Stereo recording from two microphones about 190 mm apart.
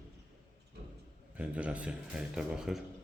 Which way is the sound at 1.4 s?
5° right (ahead or behind).